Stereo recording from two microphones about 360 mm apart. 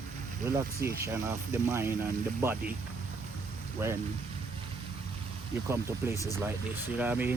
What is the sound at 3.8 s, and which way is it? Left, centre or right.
Speech, centre.